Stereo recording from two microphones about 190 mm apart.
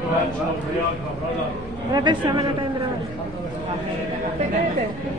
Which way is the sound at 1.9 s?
20° right (ahead or behind).